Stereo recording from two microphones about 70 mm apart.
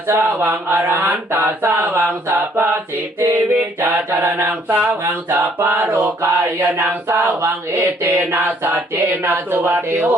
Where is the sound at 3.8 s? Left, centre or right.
Right.